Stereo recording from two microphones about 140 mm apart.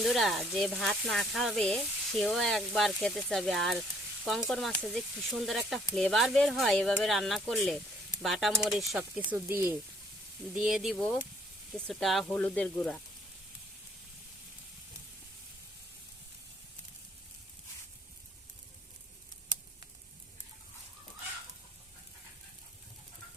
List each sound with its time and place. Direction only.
0.0 s speech: centre (ahead or behind)
9.3 s speech: 15° right (ahead or behind)
10.5 s speech: 5° right (ahead or behind)